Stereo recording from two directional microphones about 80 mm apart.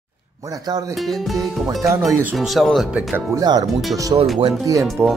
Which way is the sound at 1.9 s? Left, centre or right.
Centre.